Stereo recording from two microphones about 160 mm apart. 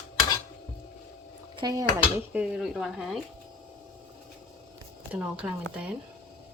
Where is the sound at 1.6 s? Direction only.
25° right (ahead or behind).